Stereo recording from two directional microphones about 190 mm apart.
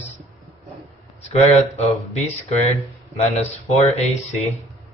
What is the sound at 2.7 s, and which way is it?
Speech, 35° left (ahead or behind).